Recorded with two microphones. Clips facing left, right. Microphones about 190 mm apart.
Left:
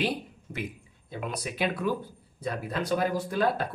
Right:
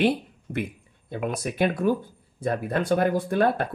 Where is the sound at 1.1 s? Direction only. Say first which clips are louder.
Right 6 dB; 55° right (ahead or behind).